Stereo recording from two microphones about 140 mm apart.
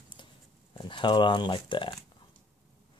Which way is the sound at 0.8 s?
35° left (ahead or behind).